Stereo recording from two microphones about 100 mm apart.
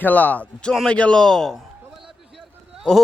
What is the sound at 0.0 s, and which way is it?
A man's voice, 15° left (ahead or behind).